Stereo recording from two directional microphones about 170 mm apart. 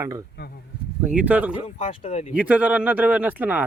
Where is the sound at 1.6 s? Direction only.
40° left (ahead or behind).